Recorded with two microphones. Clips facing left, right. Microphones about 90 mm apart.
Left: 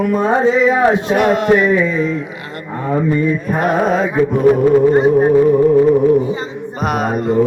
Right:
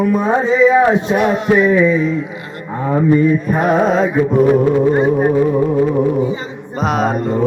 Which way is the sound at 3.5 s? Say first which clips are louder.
Right 1 dB; centre (ahead or behind).